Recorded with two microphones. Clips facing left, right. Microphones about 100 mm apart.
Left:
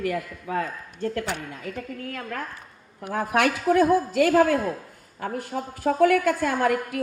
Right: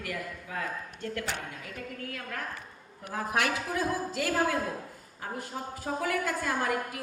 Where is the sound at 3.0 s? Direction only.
65° left (ahead or behind).